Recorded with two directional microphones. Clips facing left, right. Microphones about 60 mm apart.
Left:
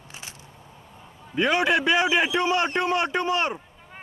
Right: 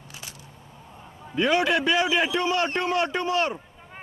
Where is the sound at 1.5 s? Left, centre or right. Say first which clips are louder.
Left 1 dB; centre.